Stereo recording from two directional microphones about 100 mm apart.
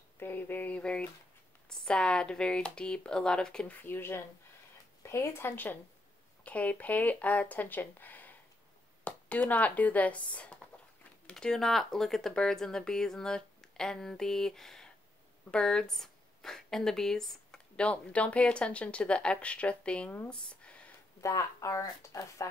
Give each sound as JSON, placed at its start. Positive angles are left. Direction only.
{"t": 0.2, "sound": "a sound", "side_deg": 20}
{"t": 1.7, "sound": "speech", "side_deg": 10}
{"t": 21.2, "sound": "speech", "side_deg": 35}